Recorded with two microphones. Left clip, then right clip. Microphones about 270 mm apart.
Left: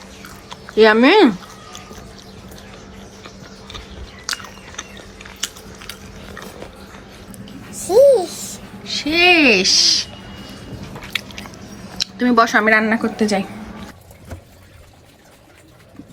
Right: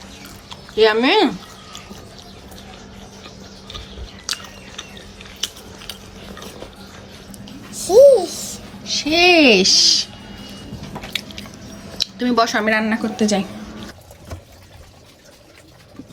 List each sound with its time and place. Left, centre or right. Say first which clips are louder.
0.4 s speech: left 3 dB; centre
4.3 s biting: left 1 dB; centre
7.8 s babbling: right 2 dB; centre
8.2 s babbling: even; centre
8.8 s a sound: even; centre
11.3 s chewing: left 1 dB; centre